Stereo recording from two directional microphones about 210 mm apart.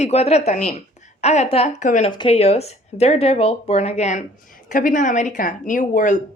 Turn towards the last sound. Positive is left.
turn(degrees=35)  # may be behind; listen again after turning